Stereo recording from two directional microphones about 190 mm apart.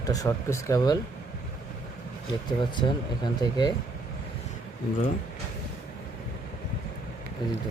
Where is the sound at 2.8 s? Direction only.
20° left (ahead or behind).